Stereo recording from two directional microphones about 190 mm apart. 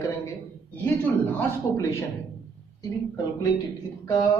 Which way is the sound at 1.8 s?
15° left (ahead or behind).